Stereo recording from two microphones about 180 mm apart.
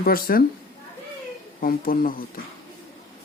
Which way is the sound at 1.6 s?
50° left (ahead or behind).